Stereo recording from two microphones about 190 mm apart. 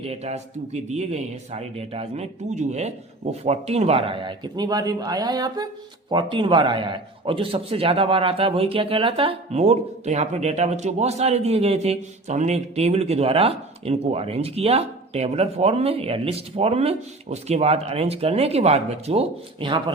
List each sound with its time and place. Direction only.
0.0 s a man's voice: 35° right (ahead or behind)